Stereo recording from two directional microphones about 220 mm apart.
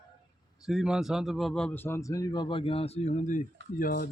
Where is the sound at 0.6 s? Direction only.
Centre (ahead or behind).